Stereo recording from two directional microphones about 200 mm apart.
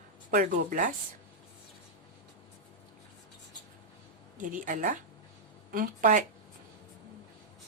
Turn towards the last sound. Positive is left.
turn(degrees=-40)  # may be behind; listen again after turning